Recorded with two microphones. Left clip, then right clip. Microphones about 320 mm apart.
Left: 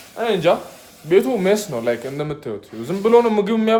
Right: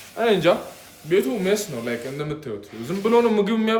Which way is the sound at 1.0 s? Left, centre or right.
Centre.